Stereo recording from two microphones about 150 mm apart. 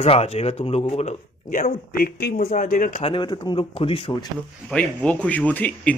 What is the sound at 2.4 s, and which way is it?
Speech, 55° left (ahead or behind).